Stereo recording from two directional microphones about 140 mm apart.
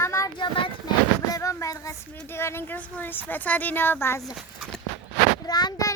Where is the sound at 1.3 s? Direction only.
20° left (ahead or behind).